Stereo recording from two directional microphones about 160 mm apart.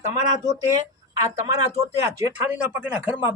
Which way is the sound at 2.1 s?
15° right (ahead or behind).